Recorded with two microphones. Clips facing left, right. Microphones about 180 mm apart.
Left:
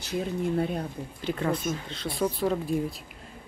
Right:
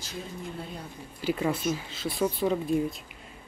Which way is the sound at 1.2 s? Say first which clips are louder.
Right 1 dB; 5° right (ahead or behind).